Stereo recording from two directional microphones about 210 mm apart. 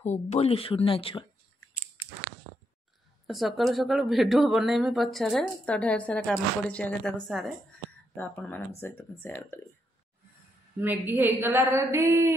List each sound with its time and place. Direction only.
0.0 s speech: 30° left (ahead or behind)
3.3 s speech: centre (ahead or behind)
10.8 s a woman's voice: 10° right (ahead or behind)